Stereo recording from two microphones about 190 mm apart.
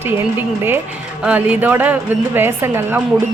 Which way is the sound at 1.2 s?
5° right (ahead or behind).